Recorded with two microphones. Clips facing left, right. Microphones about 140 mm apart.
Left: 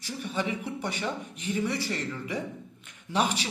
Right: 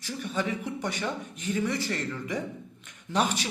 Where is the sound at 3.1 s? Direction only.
10° left (ahead or behind).